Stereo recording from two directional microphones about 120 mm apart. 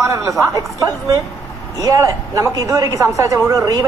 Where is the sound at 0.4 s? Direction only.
25° right (ahead or behind).